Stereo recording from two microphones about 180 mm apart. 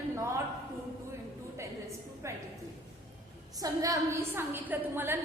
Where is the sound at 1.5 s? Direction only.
15° right (ahead or behind).